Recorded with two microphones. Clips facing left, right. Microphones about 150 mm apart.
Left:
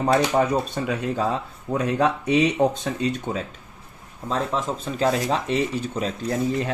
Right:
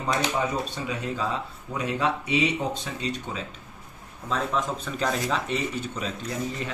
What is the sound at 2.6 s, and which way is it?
Speech, 60° left (ahead or behind).